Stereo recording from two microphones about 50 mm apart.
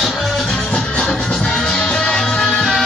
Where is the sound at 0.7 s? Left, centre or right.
Left.